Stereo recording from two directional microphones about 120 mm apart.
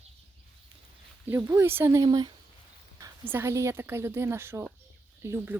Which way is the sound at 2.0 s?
35° right (ahead or behind).